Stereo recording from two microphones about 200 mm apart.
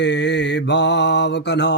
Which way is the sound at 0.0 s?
60° left (ahead or behind).